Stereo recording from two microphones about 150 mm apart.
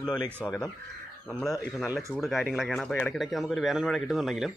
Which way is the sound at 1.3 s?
5° left (ahead or behind).